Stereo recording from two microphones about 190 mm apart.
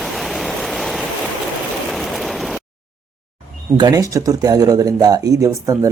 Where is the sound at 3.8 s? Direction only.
20° right (ahead or behind).